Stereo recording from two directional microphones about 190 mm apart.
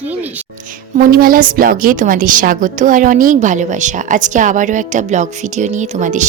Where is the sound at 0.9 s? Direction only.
50° right (ahead or behind).